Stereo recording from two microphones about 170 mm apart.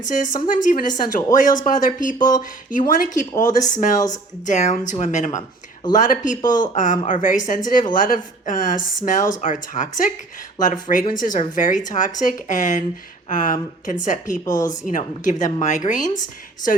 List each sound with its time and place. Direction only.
0.0 s a woman's voice: 50° left (ahead or behind)
3.9 s speech: 20° left (ahead or behind)
4.4 s a woman's voice: 45° left (ahead or behind)